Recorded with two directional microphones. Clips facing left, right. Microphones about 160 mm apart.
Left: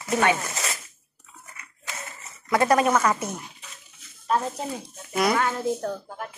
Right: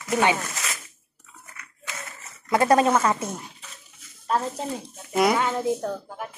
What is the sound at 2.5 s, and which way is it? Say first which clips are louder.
Speech: right 1 dB; 25° right (ahead or behind).